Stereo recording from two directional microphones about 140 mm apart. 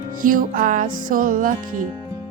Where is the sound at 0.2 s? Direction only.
75° right (ahead or behind).